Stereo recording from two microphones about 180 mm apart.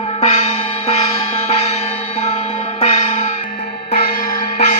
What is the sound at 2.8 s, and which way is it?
Music, 35° left (ahead or behind).